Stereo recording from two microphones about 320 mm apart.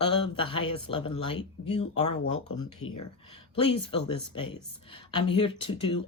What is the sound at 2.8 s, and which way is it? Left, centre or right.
Speech, left.